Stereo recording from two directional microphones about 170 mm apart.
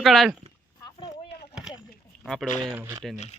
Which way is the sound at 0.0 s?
Centre (ahead or behind).